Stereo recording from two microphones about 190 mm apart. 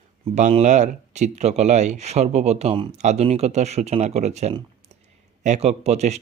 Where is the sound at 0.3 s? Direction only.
40° right (ahead or behind).